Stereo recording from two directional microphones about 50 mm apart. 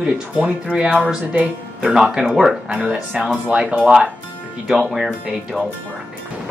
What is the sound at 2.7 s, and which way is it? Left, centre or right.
Speech, right.